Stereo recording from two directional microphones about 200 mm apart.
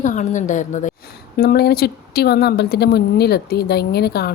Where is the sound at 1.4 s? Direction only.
50° left (ahead or behind).